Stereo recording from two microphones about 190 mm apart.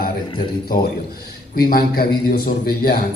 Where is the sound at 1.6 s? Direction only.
50° left (ahead or behind).